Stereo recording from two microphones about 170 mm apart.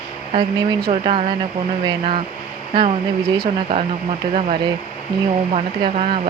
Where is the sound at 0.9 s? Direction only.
40° right (ahead or behind).